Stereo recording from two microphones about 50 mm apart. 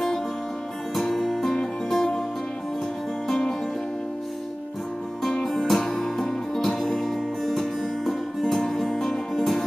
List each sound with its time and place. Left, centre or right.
0.9 s music: centre
3.3 s music: centre
5.4 s music: centre